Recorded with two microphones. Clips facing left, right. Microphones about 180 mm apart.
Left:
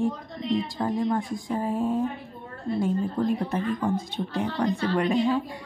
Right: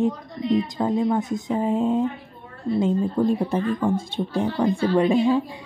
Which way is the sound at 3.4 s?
30° right (ahead or behind).